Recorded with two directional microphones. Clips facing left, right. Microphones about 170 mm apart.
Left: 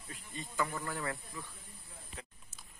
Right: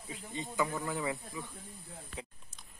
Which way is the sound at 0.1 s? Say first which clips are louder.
Right 5 dB; 20° right (ahead or behind).